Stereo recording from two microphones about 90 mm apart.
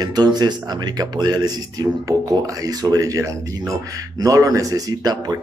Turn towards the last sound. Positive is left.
turn(degrees=-45)  # may be behind; listen again after turning